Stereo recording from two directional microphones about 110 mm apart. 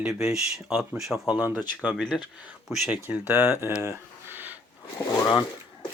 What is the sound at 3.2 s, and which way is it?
Speech, 25° right (ahead or behind).